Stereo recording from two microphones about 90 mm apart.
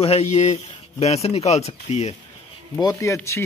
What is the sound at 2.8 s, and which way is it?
Speech, 45° left (ahead or behind).